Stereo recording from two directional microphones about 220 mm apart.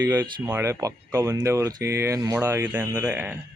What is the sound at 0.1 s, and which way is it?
Speech, 15° right (ahead or behind).